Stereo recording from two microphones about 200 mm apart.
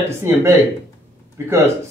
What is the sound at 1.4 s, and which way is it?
Speech, 15° right (ahead or behind).